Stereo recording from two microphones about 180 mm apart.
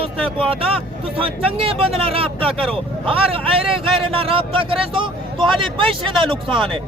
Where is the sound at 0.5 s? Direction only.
30° right (ahead or behind).